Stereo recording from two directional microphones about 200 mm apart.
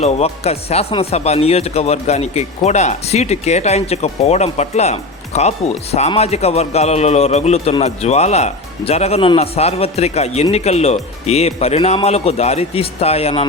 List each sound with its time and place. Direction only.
0.0 s speech: 30° left (ahead or behind)